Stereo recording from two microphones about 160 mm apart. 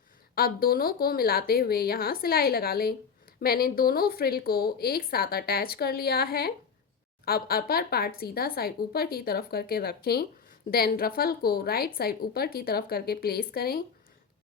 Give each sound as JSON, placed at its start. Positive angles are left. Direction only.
{"t": 0.3, "sound": "a woman's voice", "side_deg": 65}